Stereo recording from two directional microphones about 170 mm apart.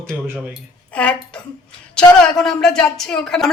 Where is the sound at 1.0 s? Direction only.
5° left (ahead or behind).